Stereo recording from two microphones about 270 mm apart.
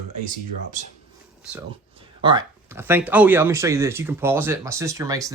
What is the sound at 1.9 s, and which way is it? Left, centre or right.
Speech, centre.